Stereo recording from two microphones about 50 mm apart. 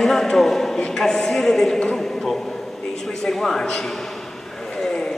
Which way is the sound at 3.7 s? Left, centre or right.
Centre.